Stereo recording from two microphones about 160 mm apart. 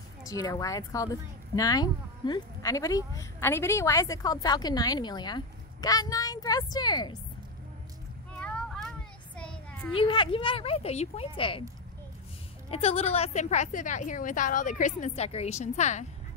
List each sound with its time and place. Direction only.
0.3 s a woman's voice: 20° left (ahead or behind)
8.4 s child singing: 5° left (ahead or behind)
9.9 s a woman's voice: 30° left (ahead or behind)
12.7 s a woman's voice: 40° left (ahead or behind)